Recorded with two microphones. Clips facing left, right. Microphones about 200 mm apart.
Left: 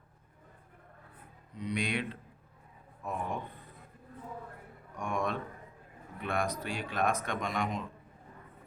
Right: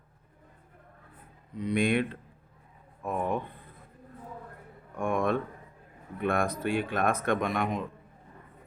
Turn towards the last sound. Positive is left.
turn(degrees=-55)  # may be behind; listen again after turning